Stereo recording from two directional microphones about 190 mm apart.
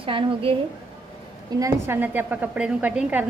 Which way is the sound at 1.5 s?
15° right (ahead or behind).